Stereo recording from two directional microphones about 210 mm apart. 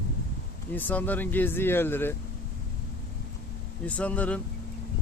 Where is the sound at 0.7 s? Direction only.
10° left (ahead or behind).